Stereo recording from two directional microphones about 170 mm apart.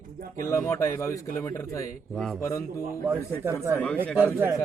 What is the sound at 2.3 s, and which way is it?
Speech, 15° left (ahead or behind).